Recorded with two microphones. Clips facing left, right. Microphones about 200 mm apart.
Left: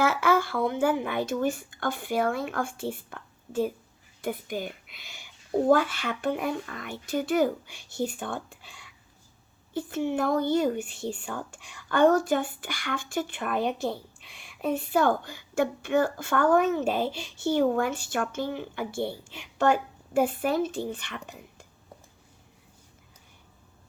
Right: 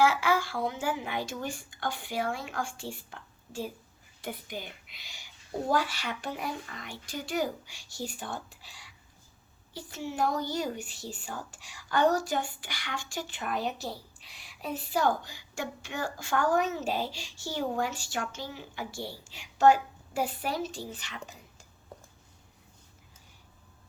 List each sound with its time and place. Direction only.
0.0 s speech: 55° left (ahead or behind)
9.7 s speech: 55° left (ahead or behind)
11.5 s a woman's voice: 5° right (ahead or behind)
11.9 s speech: 55° left (ahead or behind)